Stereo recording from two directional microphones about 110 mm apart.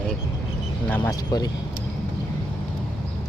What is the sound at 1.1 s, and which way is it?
Speech, 35° left (ahead or behind).